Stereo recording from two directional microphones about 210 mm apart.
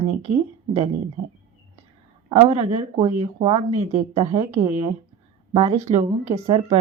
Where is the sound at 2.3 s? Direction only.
30° right (ahead or behind).